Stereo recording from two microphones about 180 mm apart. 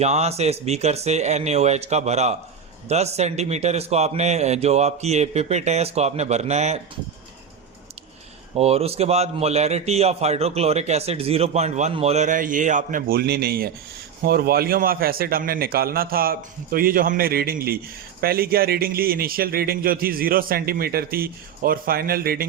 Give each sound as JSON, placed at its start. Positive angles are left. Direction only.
{"t": 0.0, "sound": "a man's voice", "side_deg": -35}
{"t": 8.5, "sound": "a man's voice", "side_deg": -35}